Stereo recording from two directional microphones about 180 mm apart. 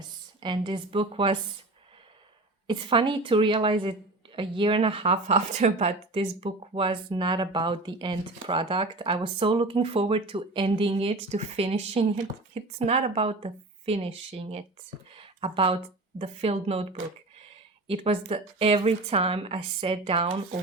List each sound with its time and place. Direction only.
0.3 s speech: 25° right (ahead or behind)
2.6 s speech: 25° right (ahead or behind)